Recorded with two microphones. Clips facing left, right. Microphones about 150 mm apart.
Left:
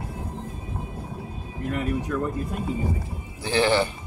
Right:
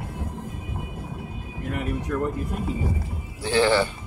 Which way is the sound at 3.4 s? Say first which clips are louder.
Right 1 dB; 15° left (ahead or behind).